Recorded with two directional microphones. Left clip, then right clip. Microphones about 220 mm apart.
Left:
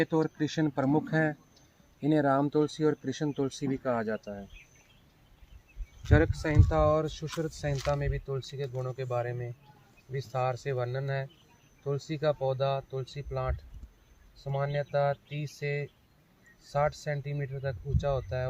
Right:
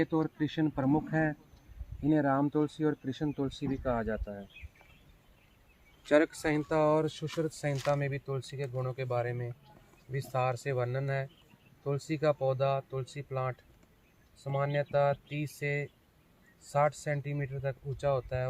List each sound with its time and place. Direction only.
0.0 s speech: 45° left (ahead or behind); by 4.2 s 15° left (ahead or behind)
6.1 s speech: 50° right (ahead or behind); by 18.4 s 30° right (ahead or behind)